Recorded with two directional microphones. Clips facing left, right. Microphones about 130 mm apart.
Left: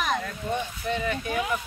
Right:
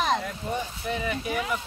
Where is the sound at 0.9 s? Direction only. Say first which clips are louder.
Left 2 dB; 15° right (ahead or behind).